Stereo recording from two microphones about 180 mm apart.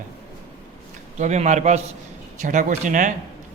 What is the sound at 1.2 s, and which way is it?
A man's voice, 40° right (ahead or behind).